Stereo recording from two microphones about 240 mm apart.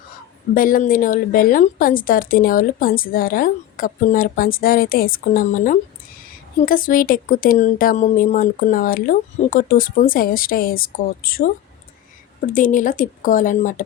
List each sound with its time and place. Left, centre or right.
0.5 s a woman's voice: left
12.5 s a woman's voice: left